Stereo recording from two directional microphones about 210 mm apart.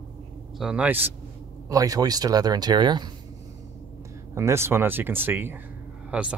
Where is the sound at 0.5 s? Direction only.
5° right (ahead or behind); by 3.1 s 20° right (ahead or behind).